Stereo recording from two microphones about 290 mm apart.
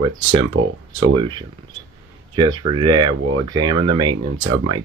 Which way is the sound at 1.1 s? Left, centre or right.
Centre.